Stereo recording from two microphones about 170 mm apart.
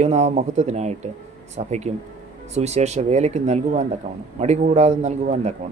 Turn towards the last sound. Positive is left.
turn(degrees=-40)  # may be behind; listen again after turning